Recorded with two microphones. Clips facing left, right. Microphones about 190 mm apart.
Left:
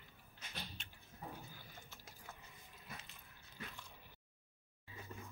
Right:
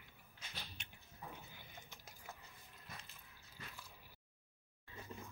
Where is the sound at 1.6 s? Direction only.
20° right (ahead or behind).